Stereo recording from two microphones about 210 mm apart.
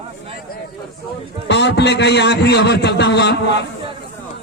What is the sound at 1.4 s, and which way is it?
A man's voice, 55° left (ahead or behind).